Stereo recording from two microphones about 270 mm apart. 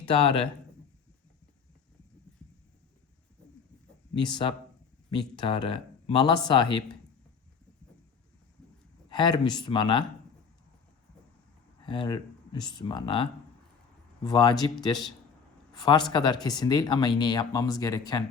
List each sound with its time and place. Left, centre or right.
0.0 s speech: centre
4.2 s speech: centre
9.0 s speech: centre
11.9 s speech: centre
14.3 s speech: centre